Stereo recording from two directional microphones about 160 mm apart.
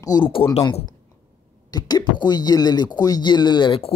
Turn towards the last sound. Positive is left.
turn(degrees=35)  # may be behind; listen again after turning